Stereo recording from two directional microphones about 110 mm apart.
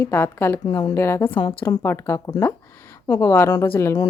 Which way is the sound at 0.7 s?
35° left (ahead or behind).